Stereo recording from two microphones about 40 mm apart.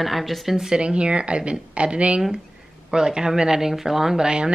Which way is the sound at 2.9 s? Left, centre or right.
Centre.